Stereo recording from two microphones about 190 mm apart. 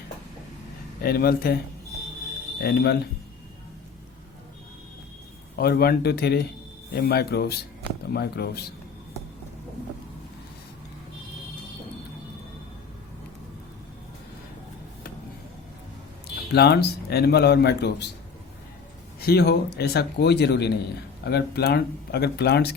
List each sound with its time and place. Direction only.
1.0 s speech: 50° left (ahead or behind)
2.6 s speech: 60° left (ahead or behind)
5.5 s speech: 55° left (ahead or behind)
16.5 s speech: 60° left (ahead or behind)
19.2 s speech: 55° left (ahead or behind)